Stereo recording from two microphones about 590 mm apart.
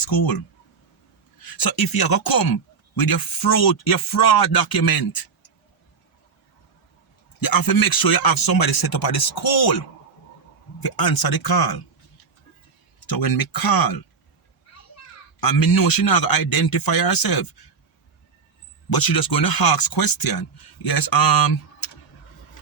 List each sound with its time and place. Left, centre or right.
0.0 s a man's voice: left
1.4 s a man's voice: left
7.4 s a man's voice: left
10.8 s a man's voice: left
13.1 s a man's voice: left
15.4 s a man's voice: left
18.9 s a man's voice: left